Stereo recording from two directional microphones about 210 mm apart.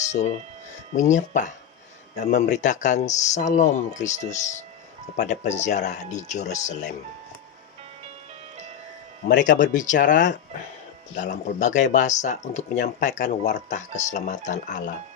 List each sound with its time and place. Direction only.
0.0 s music: 35° left (ahead or behind)
0.9 s speech: 35° left (ahead or behind)
9.4 s speech: 35° left (ahead or behind)
11.3 s speech: 35° left (ahead or behind)